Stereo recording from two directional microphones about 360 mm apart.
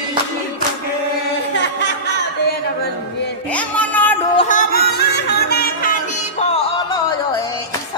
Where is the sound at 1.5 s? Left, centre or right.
Left.